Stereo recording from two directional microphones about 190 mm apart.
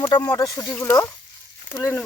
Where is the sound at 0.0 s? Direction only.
20° left (ahead or behind).